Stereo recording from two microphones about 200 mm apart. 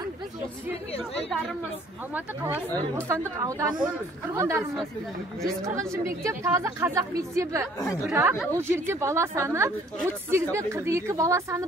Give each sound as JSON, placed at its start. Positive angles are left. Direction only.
{"t": 3.1, "sound": "speech", "side_deg": -15}